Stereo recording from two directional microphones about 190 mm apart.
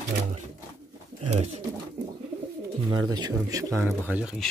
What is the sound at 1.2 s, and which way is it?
Bird, 35° right (ahead or behind).